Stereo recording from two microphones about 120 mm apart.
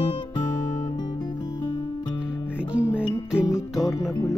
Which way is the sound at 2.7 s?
10° right (ahead or behind).